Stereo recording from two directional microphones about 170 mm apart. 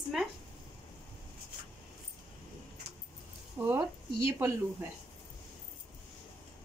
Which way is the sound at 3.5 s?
15° right (ahead or behind).